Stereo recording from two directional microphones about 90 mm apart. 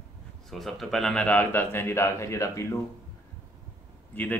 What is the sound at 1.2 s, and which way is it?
Speech, 15° left (ahead or behind).